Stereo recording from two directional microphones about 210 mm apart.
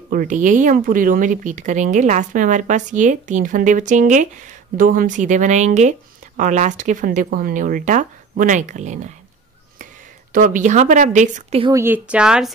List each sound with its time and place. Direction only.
0.1 s speech: 40° right (ahead or behind)
10.3 s speech: 40° right (ahead or behind)
11.6 s speech: 15° right (ahead or behind)